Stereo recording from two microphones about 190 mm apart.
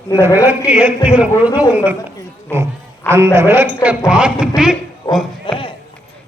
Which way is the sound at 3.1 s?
15° right (ahead or behind).